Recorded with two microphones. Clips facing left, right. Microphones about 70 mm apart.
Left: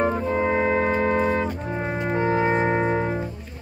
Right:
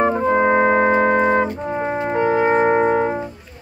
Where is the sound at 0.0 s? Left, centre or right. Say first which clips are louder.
Right 6 dB; right.